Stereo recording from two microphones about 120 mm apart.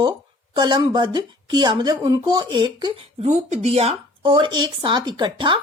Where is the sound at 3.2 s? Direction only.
80° right.